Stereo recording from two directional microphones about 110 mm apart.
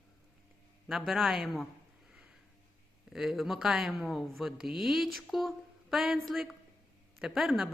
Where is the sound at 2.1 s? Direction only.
10° right (ahead or behind).